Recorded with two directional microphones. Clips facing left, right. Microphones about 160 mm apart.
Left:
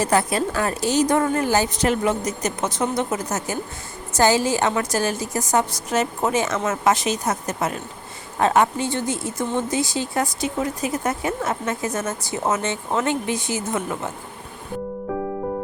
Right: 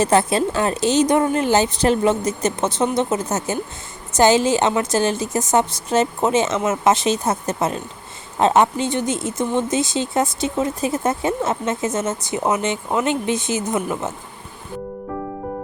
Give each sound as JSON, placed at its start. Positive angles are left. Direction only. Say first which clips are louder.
{"t": 0.0, "sound": "speech", "louder": "right 3 dB", "side_deg": -25}